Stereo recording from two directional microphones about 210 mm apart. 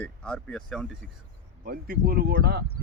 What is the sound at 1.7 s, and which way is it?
Speech, 45° right (ahead or behind).